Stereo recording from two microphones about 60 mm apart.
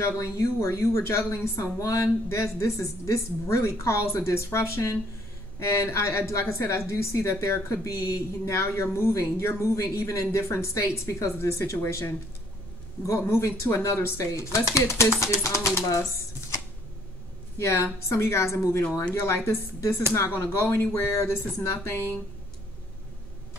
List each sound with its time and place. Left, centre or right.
0.0 s a woman's voice: left
1.8 s a woman's voice: left
13.3 s a woman's voice: left
13.7 s a woman's voice: left
17.6 s a woman's voice: left